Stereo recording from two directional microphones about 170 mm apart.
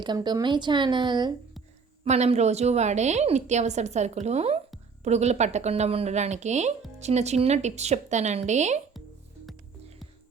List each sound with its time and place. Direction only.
0.0 s speech: 25° right (ahead or behind)
2.0 s a woman's voice: 40° right (ahead or behind)